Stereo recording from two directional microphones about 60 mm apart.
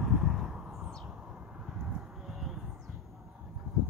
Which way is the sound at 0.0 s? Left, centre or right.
Centre.